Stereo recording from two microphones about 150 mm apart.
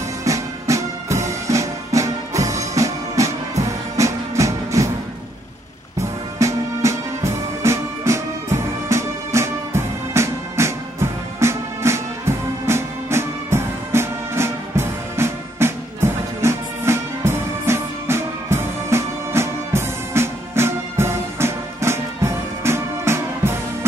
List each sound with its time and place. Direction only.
0.2 s music: 20° right (ahead or behind)
5.9 s music: 20° right (ahead or behind)